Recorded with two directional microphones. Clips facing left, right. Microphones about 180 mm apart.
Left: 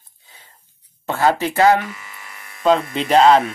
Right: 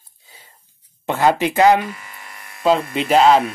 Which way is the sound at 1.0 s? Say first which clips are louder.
Right 1 dB; 15° right (ahead or behind).